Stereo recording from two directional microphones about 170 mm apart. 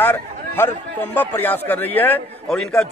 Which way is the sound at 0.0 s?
10° left (ahead or behind).